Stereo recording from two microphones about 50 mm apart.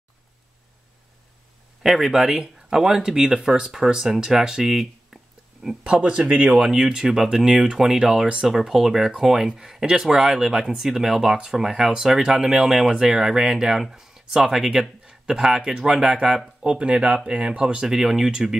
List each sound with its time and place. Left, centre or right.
1.8 s speech: centre
5.9 s speech: right
6.5 s speech: centre
16.6 s speech: right
17.9 s speech: centre